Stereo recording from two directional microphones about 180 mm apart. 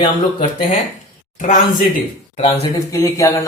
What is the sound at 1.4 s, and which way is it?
Speech, 45° left (ahead or behind).